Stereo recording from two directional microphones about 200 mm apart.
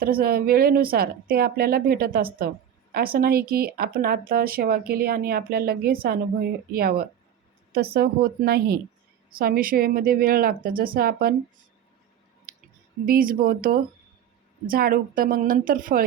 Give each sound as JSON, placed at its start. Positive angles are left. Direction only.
{"t": 0.0, "sound": "speech", "side_deg": -45}
{"t": 12.5, "sound": "a sound", "side_deg": -45}
{"t": 13.1, "sound": "speech", "side_deg": -45}